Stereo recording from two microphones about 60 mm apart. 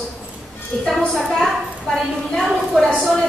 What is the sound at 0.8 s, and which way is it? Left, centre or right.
A woman's voice, centre.